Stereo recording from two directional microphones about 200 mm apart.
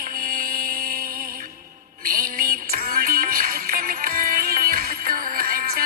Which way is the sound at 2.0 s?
45° right (ahead or behind).